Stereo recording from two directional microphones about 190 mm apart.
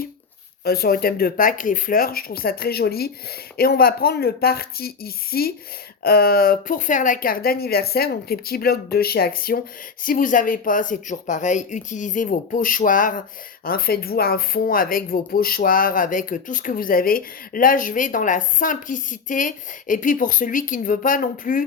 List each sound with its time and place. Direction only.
0.6 s speech: 55° left (ahead or behind)